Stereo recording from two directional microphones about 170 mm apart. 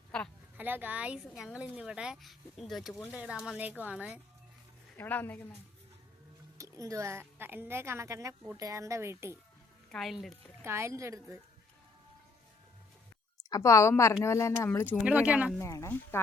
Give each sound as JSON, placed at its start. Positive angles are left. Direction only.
{"t": 0.5, "sound": "a woman's voice", "side_deg": -10}
{"t": 4.9, "sound": "speech", "side_deg": 10}
{"t": 6.6, "sound": "a woman's voice", "side_deg": -20}
{"t": 9.9, "sound": "speech", "side_deg": 0}
{"t": 10.6, "sound": "a woman's voice", "side_deg": -15}
{"t": 13.5, "sound": "speech", "side_deg": 15}
{"t": 15.0, "sound": "a woman's voice", "side_deg": -10}
{"t": 15.5, "sound": "speech", "side_deg": 15}